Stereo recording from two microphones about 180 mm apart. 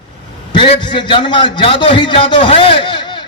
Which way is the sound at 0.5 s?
30° left (ahead or behind).